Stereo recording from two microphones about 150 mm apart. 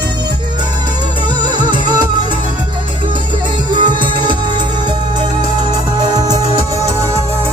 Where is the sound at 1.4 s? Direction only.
30° right (ahead or behind).